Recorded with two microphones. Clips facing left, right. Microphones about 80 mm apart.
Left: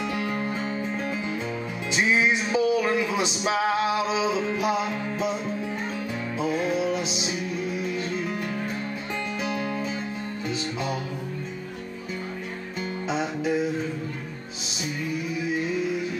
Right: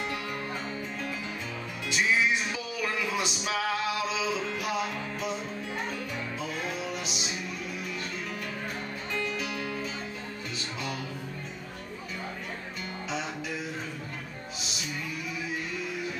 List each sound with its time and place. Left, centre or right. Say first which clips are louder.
0.1 s music: left 6 dB; left
1.9 s music: left 4 dB; left
6.4 s music: left 12 dB; left
9.4 s music: left 6 dB; left